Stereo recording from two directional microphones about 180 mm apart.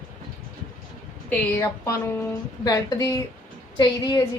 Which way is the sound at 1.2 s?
15° left (ahead or behind).